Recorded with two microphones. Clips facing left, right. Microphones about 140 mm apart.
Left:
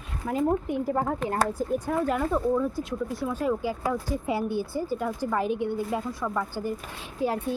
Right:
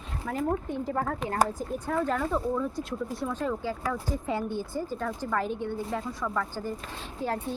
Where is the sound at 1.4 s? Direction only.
15° right (ahead or behind).